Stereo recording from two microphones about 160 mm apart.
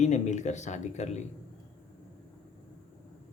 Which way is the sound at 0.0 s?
45° left (ahead or behind).